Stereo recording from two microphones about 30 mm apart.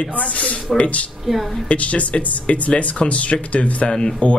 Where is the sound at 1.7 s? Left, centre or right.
Left.